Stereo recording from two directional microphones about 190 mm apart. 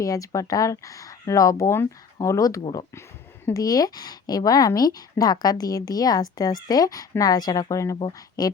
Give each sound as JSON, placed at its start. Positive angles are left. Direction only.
{"t": 0.0, "sound": "speech", "side_deg": 15}